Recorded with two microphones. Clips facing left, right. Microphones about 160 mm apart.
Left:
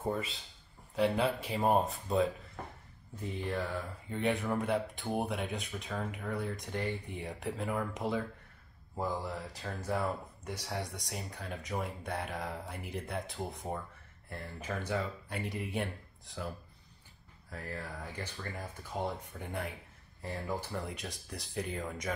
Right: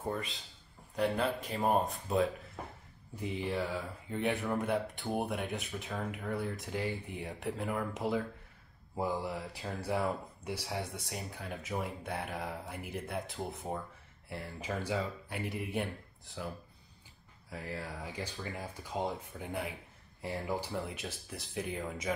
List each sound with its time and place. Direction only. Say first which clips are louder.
0.1 s speech: left 2 dB; centre (ahead or behind)